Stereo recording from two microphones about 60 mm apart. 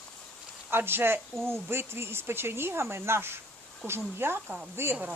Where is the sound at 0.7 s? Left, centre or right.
Right.